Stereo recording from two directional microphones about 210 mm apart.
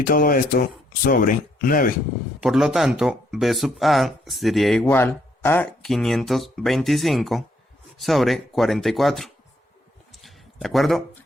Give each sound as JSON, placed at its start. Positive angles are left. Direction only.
{"t": 0.0, "sound": "speech", "side_deg": 45}
{"t": 2.4, "sound": "speech", "side_deg": 0}
{"t": 10.1, "sound": "a sound", "side_deg": 0}